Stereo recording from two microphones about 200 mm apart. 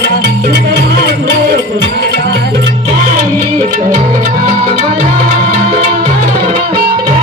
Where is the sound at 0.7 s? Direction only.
55° right (ahead or behind).